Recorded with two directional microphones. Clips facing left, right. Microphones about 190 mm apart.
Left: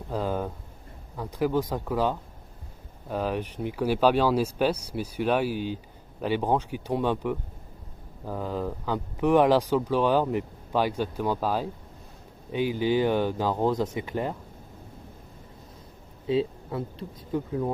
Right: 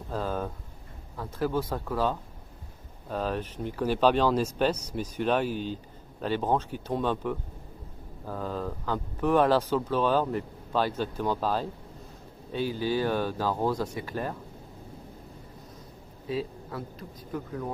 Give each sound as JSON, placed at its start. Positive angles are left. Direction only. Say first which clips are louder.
{"t": 0.1, "sound": "a sound", "louder": "left 2 dB", "side_deg": 15}
{"t": 1.1, "sound": "speech", "louder": "left 3 dB", "side_deg": 15}
{"t": 16.2, "sound": "speech", "louder": "left 6 dB", "side_deg": 25}